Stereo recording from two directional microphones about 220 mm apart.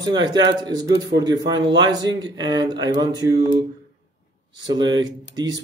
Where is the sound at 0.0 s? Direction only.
20° right (ahead or behind).